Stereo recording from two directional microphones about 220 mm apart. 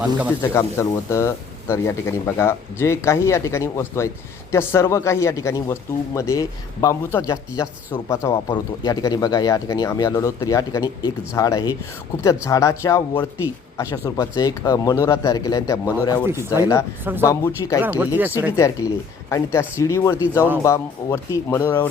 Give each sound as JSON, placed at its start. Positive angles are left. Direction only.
{"t": 0.0, "sound": "speech", "side_deg": -5}
{"t": 0.5, "sound": "speech", "side_deg": 15}
{"t": 16.2, "sound": "speech", "side_deg": -10}
{"t": 17.2, "sound": "speech", "side_deg": 15}
{"t": 17.8, "sound": "speech", "side_deg": -10}
{"t": 18.5, "sound": "speech", "side_deg": 15}